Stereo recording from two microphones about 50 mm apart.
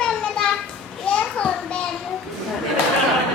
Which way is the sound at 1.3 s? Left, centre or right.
Left.